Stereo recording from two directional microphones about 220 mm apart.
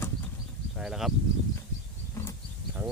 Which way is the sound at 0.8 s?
Centre (ahead or behind).